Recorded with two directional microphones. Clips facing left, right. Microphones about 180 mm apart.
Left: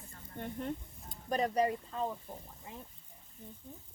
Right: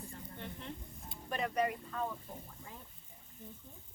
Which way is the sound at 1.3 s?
35° left (ahead or behind).